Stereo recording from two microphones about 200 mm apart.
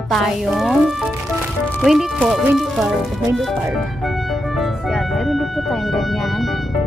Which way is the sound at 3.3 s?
Centre (ahead or behind).